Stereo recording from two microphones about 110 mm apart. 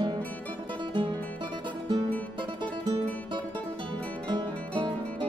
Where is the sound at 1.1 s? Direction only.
15° left (ahead or behind).